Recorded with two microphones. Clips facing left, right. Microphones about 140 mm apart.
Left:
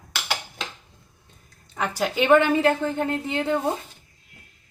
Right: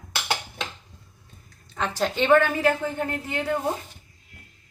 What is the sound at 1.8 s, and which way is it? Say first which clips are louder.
A woman's voice: left 1 dB; 10° left (ahead or behind).